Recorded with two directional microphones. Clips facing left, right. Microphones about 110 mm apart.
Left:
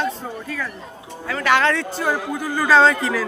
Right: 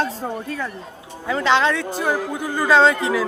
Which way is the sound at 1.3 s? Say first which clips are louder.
Even; 20° right (ahead or behind).